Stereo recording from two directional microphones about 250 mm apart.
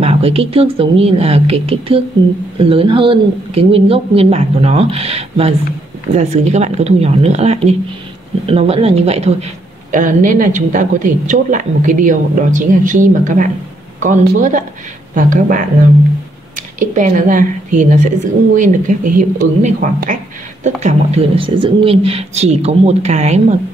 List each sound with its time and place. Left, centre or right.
0.0 s a woman's voice: right
16.8 s a woman's voice: right